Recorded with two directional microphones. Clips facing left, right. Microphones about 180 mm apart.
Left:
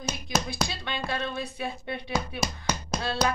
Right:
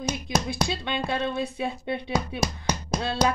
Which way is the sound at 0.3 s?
25° right (ahead or behind).